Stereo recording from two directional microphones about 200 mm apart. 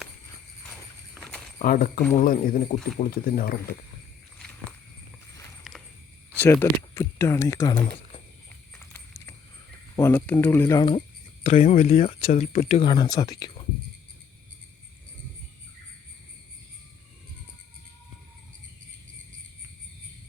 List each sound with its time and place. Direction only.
0.7 s walk: 5° left (ahead or behind)
1.5 s speech: 45° left (ahead or behind)
5.7 s a sound: centre (ahead or behind)
6.4 s speech: 10° left (ahead or behind)
9.9 s speech: 10° left (ahead or behind)